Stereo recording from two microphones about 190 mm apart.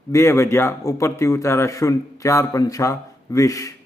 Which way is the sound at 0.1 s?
15° left (ahead or behind).